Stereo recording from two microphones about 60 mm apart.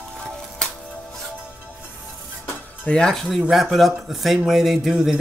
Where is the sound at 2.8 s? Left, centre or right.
Centre.